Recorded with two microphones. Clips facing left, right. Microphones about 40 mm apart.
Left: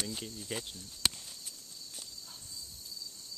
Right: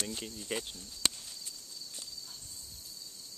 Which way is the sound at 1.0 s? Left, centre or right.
Centre.